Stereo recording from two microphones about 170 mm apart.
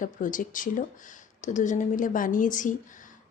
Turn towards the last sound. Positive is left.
turn(degrees=50)  # may be behind; listen again after turning